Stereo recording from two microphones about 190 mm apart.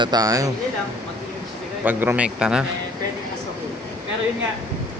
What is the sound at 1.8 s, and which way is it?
Speech, 10° right (ahead or behind).